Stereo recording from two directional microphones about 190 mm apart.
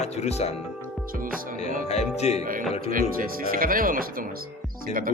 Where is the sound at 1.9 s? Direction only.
35° left (ahead or behind).